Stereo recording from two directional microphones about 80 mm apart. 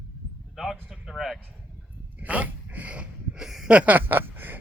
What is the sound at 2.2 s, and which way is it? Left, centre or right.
Speech, centre.